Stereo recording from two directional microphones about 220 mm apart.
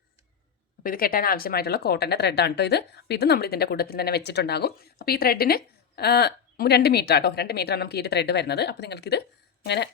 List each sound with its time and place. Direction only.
0.8 s speech: 40° left (ahead or behind)